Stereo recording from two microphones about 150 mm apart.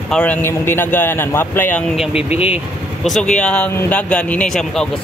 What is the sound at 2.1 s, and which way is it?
Speech, 40° left (ahead or behind).